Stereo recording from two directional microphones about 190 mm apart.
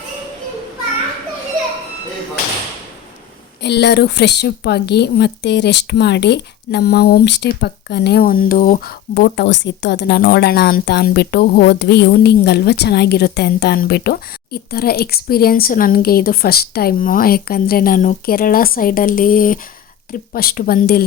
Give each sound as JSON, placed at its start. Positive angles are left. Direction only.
{"t": 3.6, "sound": "a woman's voice", "side_deg": 60}